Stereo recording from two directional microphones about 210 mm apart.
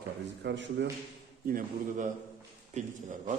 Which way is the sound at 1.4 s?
40° right (ahead or behind).